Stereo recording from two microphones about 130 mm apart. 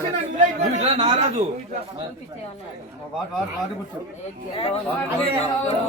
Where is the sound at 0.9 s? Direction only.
40° right (ahead or behind).